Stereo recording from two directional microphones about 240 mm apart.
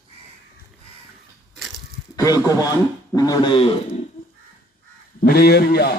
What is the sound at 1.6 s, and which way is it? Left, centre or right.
Crushing, centre.